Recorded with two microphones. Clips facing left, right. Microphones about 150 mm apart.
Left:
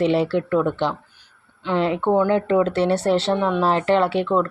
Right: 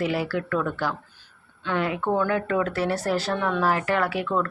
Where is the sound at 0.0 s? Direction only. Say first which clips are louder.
Left 7 dB; 25° left (ahead or behind).